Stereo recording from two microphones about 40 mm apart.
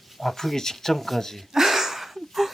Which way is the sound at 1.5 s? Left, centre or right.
Centre.